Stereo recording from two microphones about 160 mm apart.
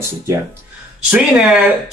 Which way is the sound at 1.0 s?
5° right (ahead or behind).